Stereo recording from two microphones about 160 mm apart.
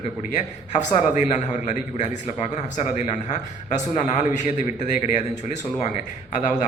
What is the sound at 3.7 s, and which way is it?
A man's voice, 45° left (ahead or behind).